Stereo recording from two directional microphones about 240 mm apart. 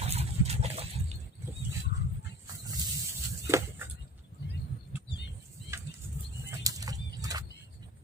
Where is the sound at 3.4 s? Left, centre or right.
Centre.